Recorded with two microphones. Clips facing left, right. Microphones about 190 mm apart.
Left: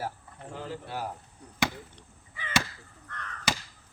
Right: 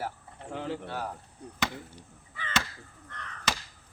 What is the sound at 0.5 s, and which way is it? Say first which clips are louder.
Bird: right 4 dB; 65° right (ahead or behind).